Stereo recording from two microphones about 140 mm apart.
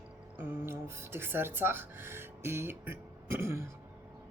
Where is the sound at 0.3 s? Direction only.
15° right (ahead or behind).